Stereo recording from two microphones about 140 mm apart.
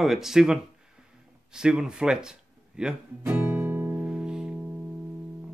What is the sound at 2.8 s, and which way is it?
Guitar, 10° right (ahead or behind).